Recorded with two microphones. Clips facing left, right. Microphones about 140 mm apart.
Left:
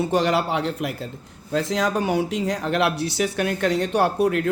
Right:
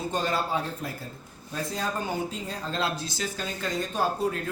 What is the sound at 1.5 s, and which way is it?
Speech, 90° left.